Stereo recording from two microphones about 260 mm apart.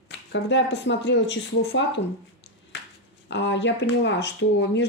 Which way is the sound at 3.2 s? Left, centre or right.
Left.